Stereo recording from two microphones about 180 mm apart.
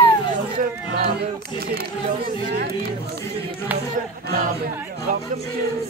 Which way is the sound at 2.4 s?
60° right (ahead or behind).